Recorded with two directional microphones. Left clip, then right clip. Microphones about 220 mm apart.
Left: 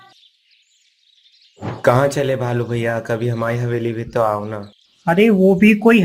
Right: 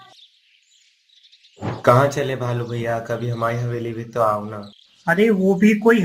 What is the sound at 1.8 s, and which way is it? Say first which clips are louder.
Speech: left 1 dB; 35° left (ahead or behind).